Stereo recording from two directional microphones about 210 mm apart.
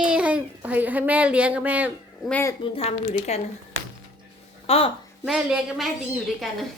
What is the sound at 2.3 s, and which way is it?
Speech, 15° left (ahead or behind).